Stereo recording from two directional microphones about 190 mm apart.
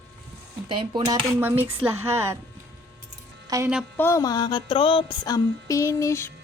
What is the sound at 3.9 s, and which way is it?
Music, 15° left (ahead or behind).